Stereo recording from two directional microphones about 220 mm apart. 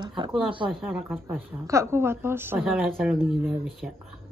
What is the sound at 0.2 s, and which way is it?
Speech, 25° right (ahead or behind).